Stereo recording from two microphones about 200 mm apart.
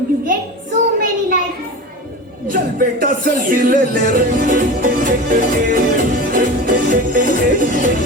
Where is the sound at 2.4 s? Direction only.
45° right (ahead or behind).